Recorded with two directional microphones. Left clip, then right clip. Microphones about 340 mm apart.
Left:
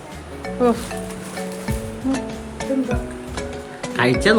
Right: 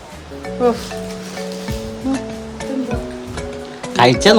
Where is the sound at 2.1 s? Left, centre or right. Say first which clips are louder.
Right 2 dB; centre.